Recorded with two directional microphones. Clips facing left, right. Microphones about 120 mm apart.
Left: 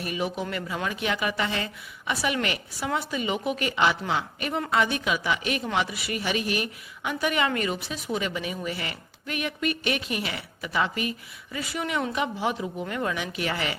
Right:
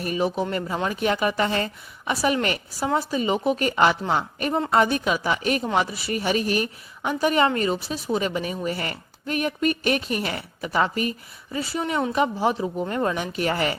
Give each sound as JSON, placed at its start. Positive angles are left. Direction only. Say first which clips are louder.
{"t": 0.0, "sound": "a woman's voice", "louder": "right 5 dB", "side_deg": -40}